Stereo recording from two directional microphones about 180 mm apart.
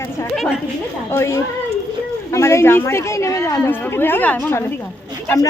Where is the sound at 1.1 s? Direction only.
15° left (ahead or behind).